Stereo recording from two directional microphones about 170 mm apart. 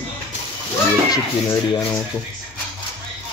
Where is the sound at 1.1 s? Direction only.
20° left (ahead or behind).